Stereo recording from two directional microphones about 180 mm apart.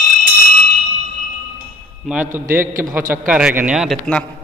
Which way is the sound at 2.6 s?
50° right (ahead or behind).